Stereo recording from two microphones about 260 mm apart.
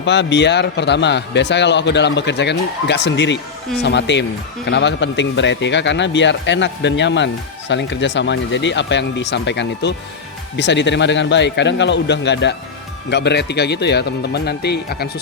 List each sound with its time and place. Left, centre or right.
0.0 s a man's voice: left